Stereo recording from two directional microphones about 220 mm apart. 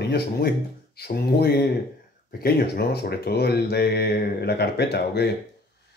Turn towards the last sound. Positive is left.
turn(degrees=50)  # may be behind; listen again after turning